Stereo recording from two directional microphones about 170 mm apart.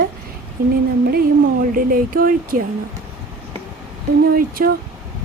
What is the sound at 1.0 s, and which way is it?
Speech, 60° right (ahead or behind).